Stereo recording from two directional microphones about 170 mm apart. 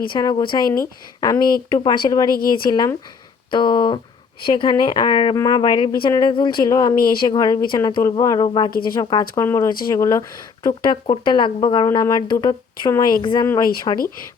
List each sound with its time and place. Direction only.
0.1 s speech: 25° left (ahead or behind)
2.3 s a woman's voice: 60° left (ahead or behind)
2.6 s speech: 25° left (ahead or behind)
6.9 s a woman's voice: 60° left (ahead or behind)
7.2 s speech: 25° left (ahead or behind)